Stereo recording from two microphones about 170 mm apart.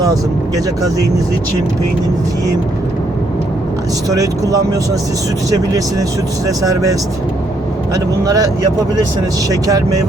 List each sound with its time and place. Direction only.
0.0 s speech: 20° right (ahead or behind)
4.1 s speech: 20° right (ahead or behind)
6.6 s speech: 20° right (ahead or behind)
7.9 s speech: 20° right (ahead or behind)